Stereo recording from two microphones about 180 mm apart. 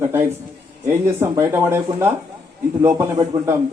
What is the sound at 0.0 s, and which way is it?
A man's voice, 15° right (ahead or behind).